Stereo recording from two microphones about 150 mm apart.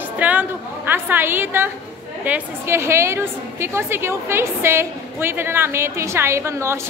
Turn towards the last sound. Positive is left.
turn(degrees=-20)  # may be behind; listen again after turning